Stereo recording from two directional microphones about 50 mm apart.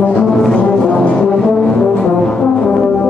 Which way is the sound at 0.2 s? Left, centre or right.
Centre.